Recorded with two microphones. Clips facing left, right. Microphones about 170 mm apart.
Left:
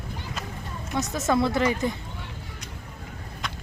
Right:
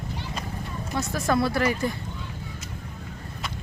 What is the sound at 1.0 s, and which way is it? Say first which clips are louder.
Speech: left 1 dB; 20° left (ahead or behind).